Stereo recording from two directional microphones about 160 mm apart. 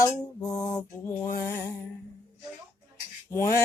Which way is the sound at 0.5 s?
20° left (ahead or behind).